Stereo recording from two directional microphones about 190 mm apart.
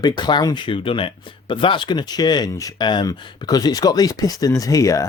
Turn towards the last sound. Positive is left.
turn(degrees=15)  # may be behind; listen again after turning